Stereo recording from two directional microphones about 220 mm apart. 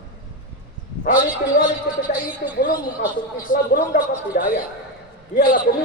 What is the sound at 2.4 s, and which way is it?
A woman's voice, 45° left (ahead or behind).